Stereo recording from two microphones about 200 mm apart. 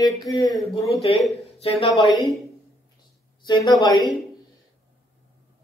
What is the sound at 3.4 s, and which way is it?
Speech, 20° left (ahead or behind).